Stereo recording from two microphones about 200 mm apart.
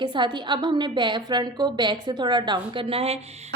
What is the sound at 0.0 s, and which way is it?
A woman's voice, 25° right (ahead or behind).